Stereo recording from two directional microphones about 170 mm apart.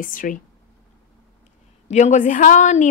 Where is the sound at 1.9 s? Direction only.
45° left (ahead or behind).